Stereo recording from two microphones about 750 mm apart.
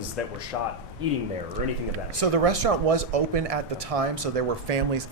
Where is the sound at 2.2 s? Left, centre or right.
Right.